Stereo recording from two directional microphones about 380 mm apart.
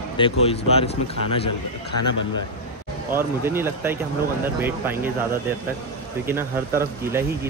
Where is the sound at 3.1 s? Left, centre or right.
Centre.